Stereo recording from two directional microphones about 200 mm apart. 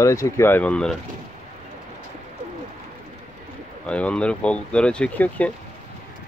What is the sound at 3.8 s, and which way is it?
Speech, 5° left (ahead or behind).